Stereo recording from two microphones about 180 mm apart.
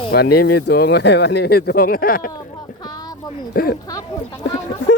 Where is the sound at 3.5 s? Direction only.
55° left (ahead or behind).